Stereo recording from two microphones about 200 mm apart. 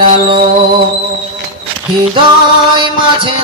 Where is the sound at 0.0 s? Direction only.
25° right (ahead or behind).